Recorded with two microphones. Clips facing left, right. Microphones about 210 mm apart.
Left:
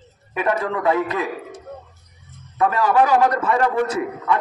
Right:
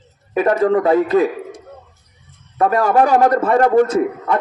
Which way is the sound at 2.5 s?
45° right (ahead or behind).